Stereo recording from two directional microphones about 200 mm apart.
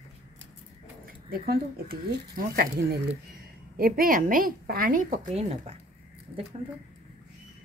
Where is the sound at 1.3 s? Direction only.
50° right (ahead or behind); by 5.8 s 30° right (ahead or behind).